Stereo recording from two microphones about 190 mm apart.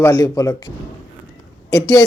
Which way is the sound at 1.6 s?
15° left (ahead or behind).